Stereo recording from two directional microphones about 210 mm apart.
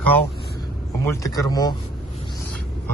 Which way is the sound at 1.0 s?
15° left (ahead or behind).